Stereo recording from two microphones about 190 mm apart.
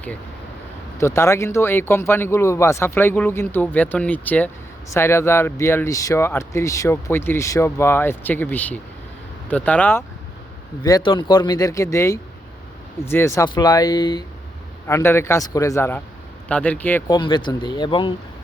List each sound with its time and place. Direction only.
0.9 s speech: 15° left (ahead or behind)
10.8 s speech: 20° left (ahead or behind)
17.1 s speech: 25° left (ahead or behind)